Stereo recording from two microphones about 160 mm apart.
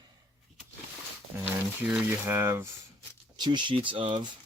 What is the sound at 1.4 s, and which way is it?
Speech, 10° right (ahead or behind).